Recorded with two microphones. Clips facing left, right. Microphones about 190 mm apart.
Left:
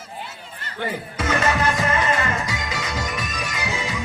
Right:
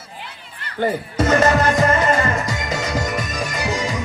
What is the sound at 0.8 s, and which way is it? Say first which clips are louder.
Music: right 8 dB; 45° right (ahead or behind).